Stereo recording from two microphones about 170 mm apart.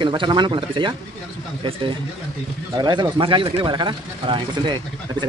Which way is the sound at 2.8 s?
25° right (ahead or behind).